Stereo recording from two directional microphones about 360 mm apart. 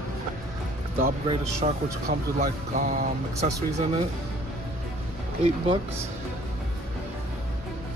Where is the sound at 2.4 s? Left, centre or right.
Right.